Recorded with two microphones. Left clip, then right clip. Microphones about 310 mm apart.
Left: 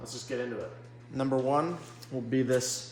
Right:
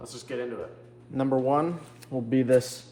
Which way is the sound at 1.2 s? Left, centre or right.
Right.